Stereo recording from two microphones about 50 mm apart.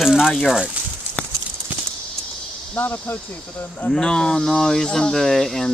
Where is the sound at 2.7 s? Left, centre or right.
Left.